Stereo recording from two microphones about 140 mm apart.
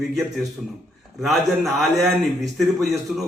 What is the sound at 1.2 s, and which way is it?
A man's voice, centre (ahead or behind).